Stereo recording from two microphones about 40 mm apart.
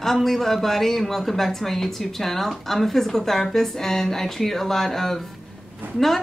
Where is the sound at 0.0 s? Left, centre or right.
Centre.